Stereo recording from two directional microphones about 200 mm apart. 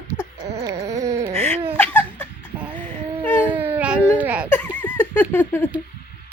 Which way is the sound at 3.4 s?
10° right (ahead or behind).